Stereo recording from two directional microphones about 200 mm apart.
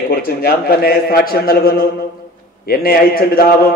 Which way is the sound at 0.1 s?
50° left (ahead or behind).